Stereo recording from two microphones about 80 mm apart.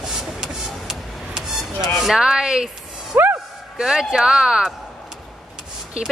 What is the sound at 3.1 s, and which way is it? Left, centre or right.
Speech, right.